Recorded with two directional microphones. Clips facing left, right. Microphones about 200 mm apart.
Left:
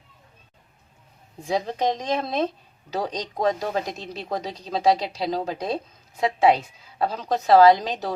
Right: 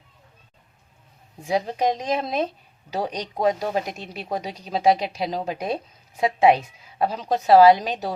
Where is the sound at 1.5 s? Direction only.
10° right (ahead or behind).